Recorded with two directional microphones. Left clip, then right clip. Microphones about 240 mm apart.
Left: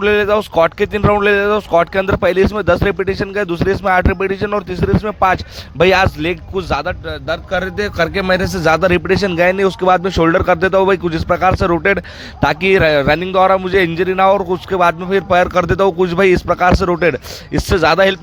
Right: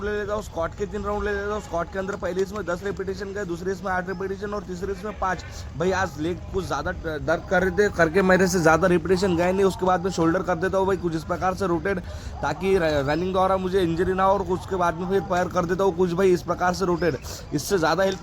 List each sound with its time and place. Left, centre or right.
0.0 s a man's voice: left
13.8 s speech: left
14.2 s a man's voice: left